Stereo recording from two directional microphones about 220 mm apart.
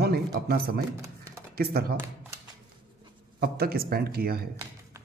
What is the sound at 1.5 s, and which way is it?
Speech, 45° right (ahead or behind).